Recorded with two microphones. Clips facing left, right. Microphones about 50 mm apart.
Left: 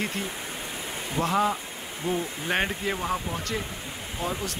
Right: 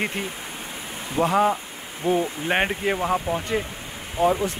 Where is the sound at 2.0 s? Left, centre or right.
Right.